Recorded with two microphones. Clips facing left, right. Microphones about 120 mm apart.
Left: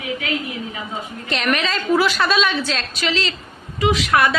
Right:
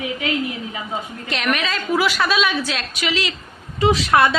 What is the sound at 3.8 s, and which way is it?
Speech, 30° right (ahead or behind).